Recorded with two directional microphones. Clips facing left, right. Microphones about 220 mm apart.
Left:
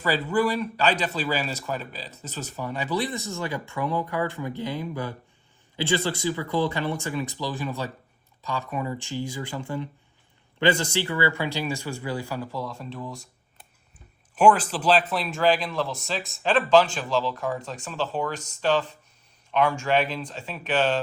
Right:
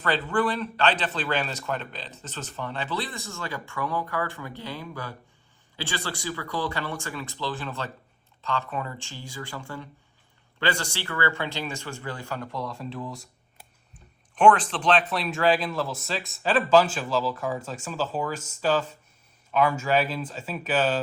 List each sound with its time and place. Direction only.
0.0 s speech: 10° left (ahead or behind)